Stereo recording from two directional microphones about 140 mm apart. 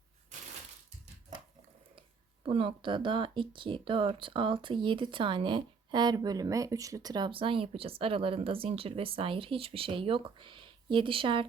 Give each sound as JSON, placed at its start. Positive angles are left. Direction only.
{"t": 2.4, "sound": "speech", "side_deg": -40}